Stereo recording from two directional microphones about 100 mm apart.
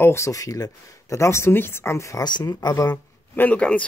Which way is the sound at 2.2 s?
45° left (ahead or behind).